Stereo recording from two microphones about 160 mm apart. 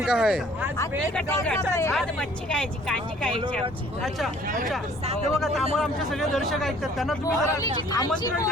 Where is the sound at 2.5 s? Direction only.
5° left (ahead or behind).